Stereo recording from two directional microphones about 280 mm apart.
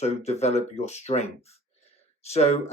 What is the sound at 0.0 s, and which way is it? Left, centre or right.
Speech, left.